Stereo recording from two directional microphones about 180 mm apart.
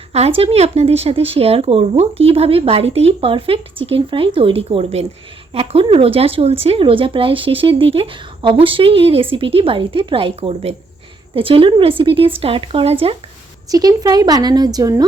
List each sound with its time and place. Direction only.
0.1 s a woman's voice: 35° right (ahead or behind)
13.7 s a woman's voice: 20° right (ahead or behind)